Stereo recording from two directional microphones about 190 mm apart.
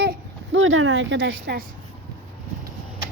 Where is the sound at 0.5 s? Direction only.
90° right; by 1.6 s 65° right (ahead or behind).